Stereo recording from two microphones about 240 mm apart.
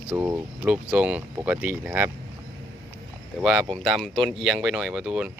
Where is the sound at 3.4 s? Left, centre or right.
Centre.